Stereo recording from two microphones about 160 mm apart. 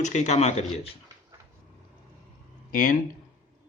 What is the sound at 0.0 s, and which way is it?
Speech, 50° left (ahead or behind).